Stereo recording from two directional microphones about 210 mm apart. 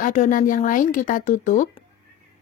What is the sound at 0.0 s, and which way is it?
Speech, 35° left (ahead or behind).